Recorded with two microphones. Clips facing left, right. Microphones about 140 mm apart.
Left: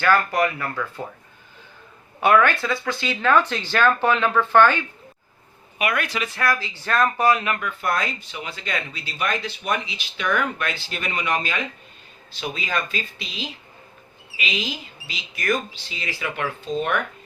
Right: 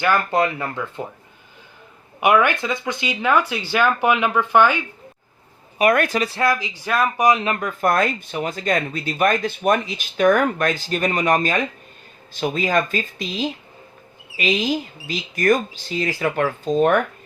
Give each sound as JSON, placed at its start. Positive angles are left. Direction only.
{"t": 0.0, "sound": "speech", "side_deg": -20}
{"t": 2.2, "sound": "speech", "side_deg": -15}
{"t": 5.8, "sound": "speech", "side_deg": -45}
{"t": 7.4, "sound": "speech", "side_deg": -35}